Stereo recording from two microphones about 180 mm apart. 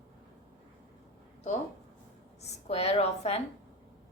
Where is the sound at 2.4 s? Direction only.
35° left (ahead or behind).